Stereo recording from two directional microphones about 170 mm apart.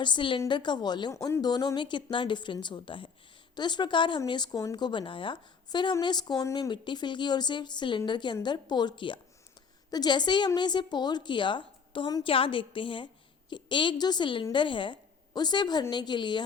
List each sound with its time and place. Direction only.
0.0 s speech: 30° left (ahead or behind)